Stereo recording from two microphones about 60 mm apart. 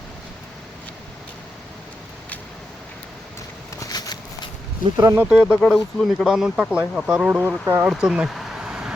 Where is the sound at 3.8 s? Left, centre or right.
Left.